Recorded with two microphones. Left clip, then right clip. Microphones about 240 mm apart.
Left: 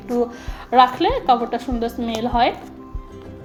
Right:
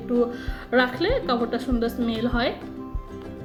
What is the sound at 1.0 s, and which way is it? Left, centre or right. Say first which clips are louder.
A woman's voice: left 6 dB; centre.